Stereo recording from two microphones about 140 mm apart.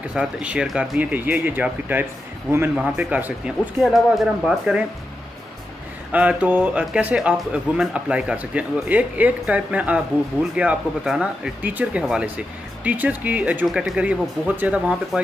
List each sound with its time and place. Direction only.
0.1 s speech: 10° right (ahead or behind)
3.8 s speech: centre (ahead or behind)
6.1 s speech: 10° right (ahead or behind)